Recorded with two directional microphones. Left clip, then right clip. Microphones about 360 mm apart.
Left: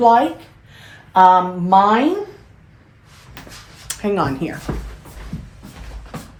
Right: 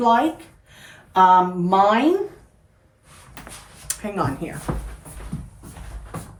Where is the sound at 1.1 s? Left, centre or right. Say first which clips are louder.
Left 4 dB; centre.